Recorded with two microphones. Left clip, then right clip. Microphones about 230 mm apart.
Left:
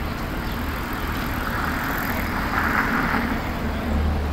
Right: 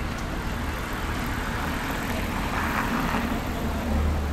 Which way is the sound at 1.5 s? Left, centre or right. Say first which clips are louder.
Left 5 dB; right.